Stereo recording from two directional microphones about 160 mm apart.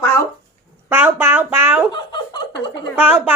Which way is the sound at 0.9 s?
15° right (ahead or behind).